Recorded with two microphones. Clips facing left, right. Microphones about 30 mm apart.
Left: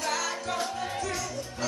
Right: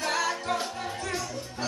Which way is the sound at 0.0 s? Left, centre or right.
Right.